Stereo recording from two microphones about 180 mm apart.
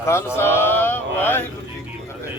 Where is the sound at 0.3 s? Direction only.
15° left (ahead or behind).